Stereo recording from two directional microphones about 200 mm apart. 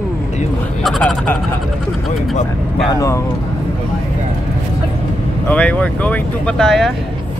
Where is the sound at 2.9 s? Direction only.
15° left (ahead or behind).